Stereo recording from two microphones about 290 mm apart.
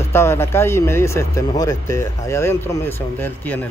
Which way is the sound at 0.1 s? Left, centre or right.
Centre.